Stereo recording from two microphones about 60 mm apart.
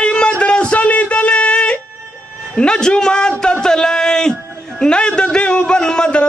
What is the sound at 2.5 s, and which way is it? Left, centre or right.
A man's voice, centre.